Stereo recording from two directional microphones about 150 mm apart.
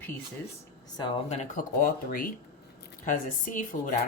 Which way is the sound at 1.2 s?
50° left (ahead or behind).